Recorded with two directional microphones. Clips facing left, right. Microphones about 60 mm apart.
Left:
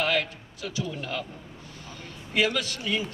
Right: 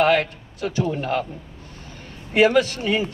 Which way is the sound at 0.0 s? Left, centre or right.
Right.